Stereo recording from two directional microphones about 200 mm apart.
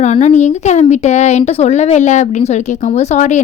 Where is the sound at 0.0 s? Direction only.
35° left (ahead or behind).